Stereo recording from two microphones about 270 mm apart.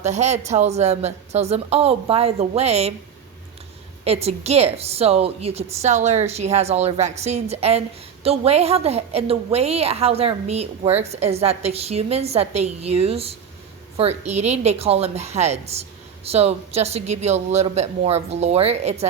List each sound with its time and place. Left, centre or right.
0.0 s a woman's voice: right
4.0 s a woman's voice: right